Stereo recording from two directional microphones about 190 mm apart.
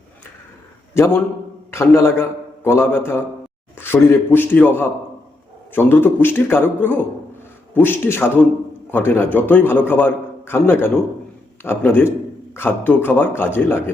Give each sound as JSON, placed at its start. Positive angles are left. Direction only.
{"t": 0.9, "sound": "a man's voice", "side_deg": 15}